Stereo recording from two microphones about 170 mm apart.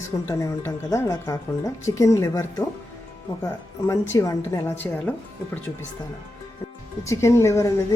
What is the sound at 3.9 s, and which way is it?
A woman's voice, 20° left (ahead or behind).